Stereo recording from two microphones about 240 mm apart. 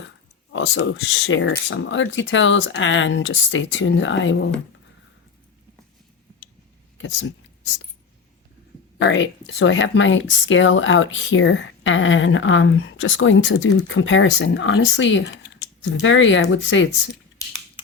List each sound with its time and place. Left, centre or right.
0.5 s speech: left
9.0 s speech: left